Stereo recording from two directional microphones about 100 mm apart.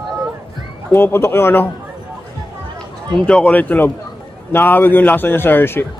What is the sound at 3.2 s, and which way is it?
A man's voice, 10° left (ahead or behind).